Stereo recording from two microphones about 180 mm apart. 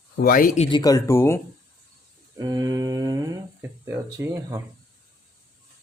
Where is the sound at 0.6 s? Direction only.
25° left (ahead or behind).